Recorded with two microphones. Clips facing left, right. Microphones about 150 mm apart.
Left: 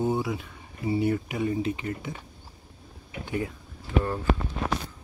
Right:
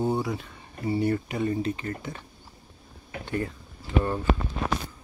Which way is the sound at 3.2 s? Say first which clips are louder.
Even; 10° left (ahead or behind).